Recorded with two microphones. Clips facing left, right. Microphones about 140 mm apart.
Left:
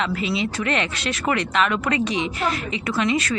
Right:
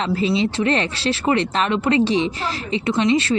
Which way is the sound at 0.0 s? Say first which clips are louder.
Right 4 dB; 30° right (ahead or behind).